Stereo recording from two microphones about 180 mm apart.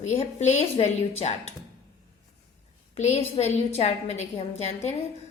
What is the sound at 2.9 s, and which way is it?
A woman's voice, 35° left (ahead or behind).